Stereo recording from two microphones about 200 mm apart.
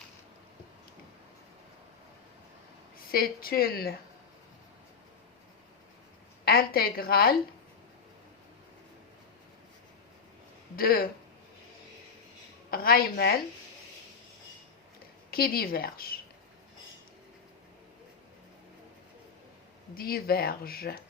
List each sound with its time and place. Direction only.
3.1 s speech: 50° left (ahead or behind)
6.4 s speech: 50° left (ahead or behind)
10.8 s speech: 50° left (ahead or behind)
12.7 s speech: 50° left (ahead or behind)
15.3 s speech: 50° left (ahead or behind)
20.0 s speech: 50° left (ahead or behind)